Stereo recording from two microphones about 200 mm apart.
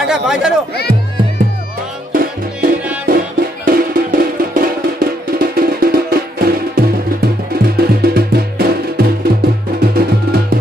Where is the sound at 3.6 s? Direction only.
50° right (ahead or behind).